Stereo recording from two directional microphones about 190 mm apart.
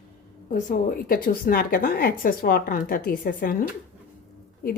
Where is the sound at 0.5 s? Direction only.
50° left (ahead or behind).